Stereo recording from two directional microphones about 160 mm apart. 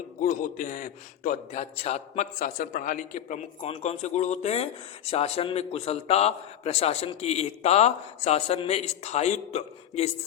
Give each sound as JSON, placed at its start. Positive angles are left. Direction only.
{"t": 0.2, "sound": "a man's voice", "side_deg": 60}
{"t": 1.7, "sound": "a man's voice", "side_deg": 40}
{"t": 3.6, "sound": "speech", "side_deg": 40}